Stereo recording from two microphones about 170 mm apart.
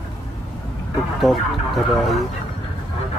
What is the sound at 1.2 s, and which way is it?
Speech, centre (ahead or behind).